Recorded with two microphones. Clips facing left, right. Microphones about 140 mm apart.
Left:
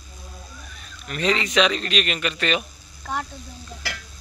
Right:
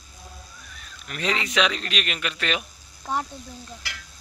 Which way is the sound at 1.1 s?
5° right (ahead or behind).